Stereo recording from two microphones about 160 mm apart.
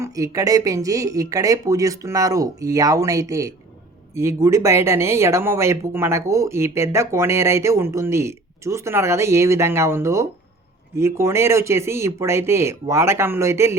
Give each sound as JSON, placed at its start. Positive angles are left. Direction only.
{"t": 0.0, "sound": "speech", "side_deg": -20}